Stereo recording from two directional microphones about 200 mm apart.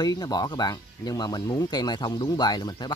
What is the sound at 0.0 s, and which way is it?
Speech, 20° left (ahead or behind).